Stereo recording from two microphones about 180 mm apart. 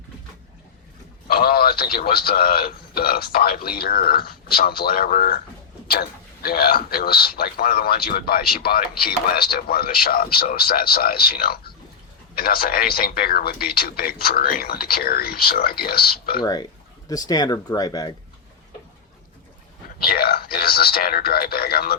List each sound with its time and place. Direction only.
1.3 s a man's voice: 55° left (ahead or behind)
16.4 s speech: 25° left (ahead or behind)
20.0 s a man's voice: 55° left (ahead or behind)